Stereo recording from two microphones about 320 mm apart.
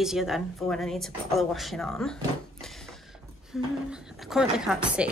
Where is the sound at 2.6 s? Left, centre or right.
Centre.